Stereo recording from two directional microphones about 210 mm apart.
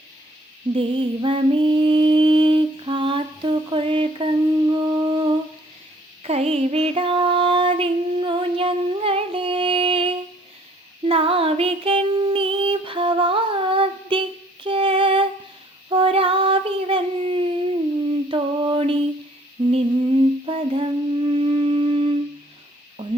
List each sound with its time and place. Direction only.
0.7 s mantra: 25° right (ahead or behind)
6.2 s female singing: 30° right (ahead or behind)
15.9 s child singing: 25° right (ahead or behind)
18.1 s mantra: 25° right (ahead or behind)
19.7 s wind instrument: 25° right (ahead or behind)